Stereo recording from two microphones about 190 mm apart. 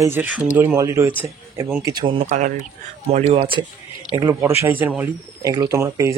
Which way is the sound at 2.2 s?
40° right (ahead or behind).